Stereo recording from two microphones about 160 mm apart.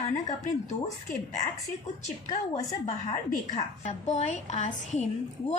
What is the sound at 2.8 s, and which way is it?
A child's voice, 45° left (ahead or behind).